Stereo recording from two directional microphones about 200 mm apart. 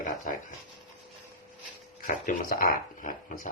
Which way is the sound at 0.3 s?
40° left (ahead or behind).